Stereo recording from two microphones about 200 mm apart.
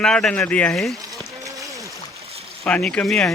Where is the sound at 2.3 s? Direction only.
30° right (ahead or behind).